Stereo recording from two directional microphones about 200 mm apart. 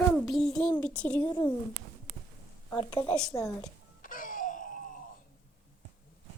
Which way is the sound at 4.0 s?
45° left (ahead or behind).